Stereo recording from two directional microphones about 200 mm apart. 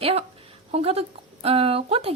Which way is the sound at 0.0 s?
30° right (ahead or behind).